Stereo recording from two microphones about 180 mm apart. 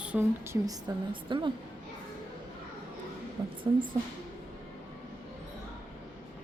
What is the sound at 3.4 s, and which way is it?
Speech, 20° right (ahead or behind).